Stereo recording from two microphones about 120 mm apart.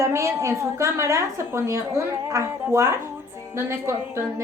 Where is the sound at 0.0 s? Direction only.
25° right (ahead or behind).